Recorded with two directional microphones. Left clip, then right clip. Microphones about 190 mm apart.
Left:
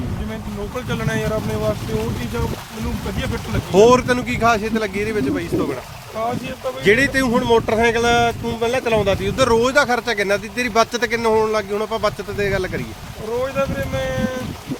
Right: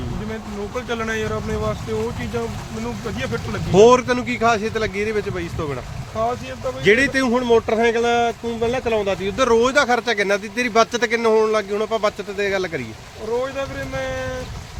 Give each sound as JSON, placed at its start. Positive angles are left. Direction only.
{"t": 0.9, "sound": "speech", "side_deg": -20}
{"t": 3.7, "sound": "speech", "side_deg": 0}
{"t": 6.8, "sound": "speech", "side_deg": 0}